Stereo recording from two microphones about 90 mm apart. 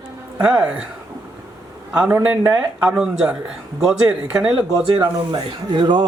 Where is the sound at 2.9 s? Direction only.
10° right (ahead or behind).